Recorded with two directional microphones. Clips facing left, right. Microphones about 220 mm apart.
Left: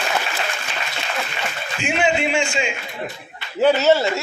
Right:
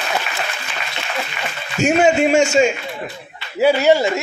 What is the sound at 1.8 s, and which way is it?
Speech, 40° right (ahead or behind).